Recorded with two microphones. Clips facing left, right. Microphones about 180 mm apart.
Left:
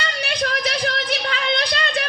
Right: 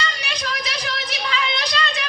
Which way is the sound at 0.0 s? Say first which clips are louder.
Left 4 dB; 55° left (ahead or behind).